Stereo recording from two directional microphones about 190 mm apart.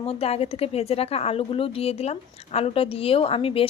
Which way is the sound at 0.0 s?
30° left (ahead or behind).